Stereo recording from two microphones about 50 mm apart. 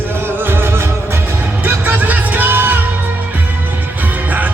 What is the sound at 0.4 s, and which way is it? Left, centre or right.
Music, right.